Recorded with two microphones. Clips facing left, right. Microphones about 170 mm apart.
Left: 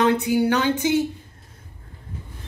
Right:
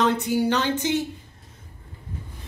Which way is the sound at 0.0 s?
10° left (ahead or behind).